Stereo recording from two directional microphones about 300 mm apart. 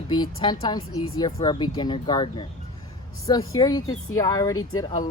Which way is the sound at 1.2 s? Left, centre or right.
Centre.